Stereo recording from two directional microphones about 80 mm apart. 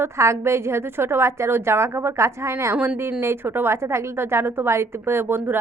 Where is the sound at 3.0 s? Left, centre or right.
Right.